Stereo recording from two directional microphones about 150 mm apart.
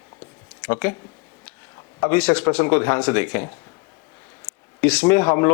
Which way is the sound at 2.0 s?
5° left (ahead or behind).